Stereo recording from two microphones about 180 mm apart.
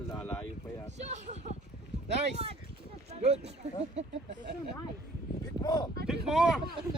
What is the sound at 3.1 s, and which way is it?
Speech, 35° right (ahead or behind).